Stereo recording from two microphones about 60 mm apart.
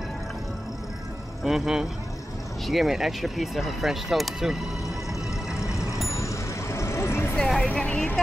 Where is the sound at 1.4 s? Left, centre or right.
Centre.